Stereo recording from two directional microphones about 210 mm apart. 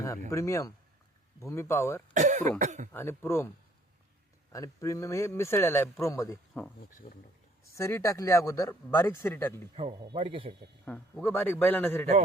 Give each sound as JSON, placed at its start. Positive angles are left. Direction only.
{"t": 0.3, "sound": "speech", "side_deg": 15}
{"t": 2.1, "sound": "speech", "side_deg": -35}
{"t": 2.9, "sound": "speech", "side_deg": 10}
{"t": 4.5, "sound": "speech", "side_deg": 15}
{"t": 7.0, "sound": "speech", "side_deg": 30}
{"t": 7.8, "sound": "speech", "side_deg": 15}
{"t": 10.0, "sound": "speech", "side_deg": -25}
{"t": 10.8, "sound": "speech", "side_deg": 10}